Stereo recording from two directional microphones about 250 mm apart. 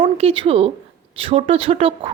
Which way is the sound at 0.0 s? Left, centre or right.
Right.